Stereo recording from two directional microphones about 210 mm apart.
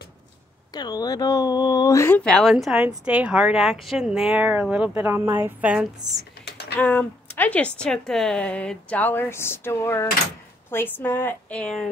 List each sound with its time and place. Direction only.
0.7 s speech: 20° left (ahead or behind); by 5.9 s 5° right (ahead or behind)
6.4 s typing: 50° left (ahead or behind)
6.8 s speech: 5° left (ahead or behind)